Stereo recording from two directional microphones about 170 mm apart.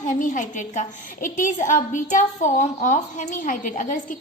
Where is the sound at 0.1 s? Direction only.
50° left (ahead or behind).